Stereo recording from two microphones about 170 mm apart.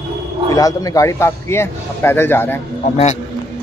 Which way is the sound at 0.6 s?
20° left (ahead or behind).